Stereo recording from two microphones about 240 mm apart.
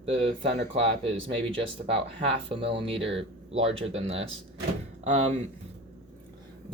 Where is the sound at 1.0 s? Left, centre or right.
Right.